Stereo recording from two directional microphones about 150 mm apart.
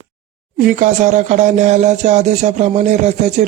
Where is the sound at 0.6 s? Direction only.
60° right (ahead or behind).